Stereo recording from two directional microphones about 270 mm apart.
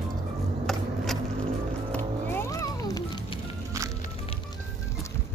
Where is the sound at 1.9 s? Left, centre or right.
Centre.